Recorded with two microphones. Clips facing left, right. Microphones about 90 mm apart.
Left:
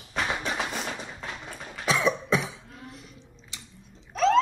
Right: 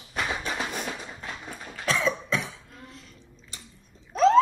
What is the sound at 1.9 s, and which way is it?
Cough, 5° left (ahead or behind).